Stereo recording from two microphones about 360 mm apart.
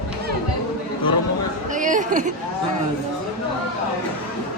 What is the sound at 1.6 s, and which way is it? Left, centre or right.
Speech, right.